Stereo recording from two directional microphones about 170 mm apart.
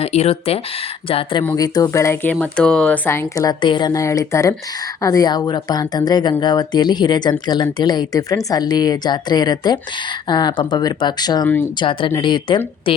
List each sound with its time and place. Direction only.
0.0 s speech: 35° left (ahead or behind); by 2.3 s 15° left (ahead or behind)
2.3 s speech: 5° left (ahead or behind); by 12.9 s 30° left (ahead or behind)